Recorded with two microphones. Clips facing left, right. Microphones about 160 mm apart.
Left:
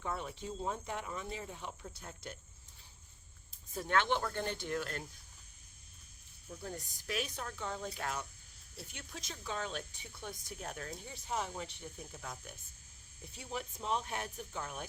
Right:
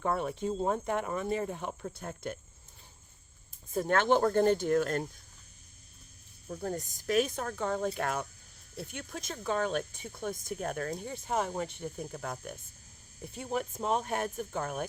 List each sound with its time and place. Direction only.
0.0 s speech: 55° right (ahead or behind)
3.8 s speech: 45° right (ahead or behind)
6.5 s speech: 50° right (ahead or behind)